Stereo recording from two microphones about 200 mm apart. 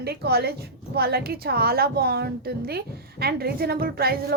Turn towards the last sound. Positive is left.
turn(degrees=-50)  # may be behind; listen again after turning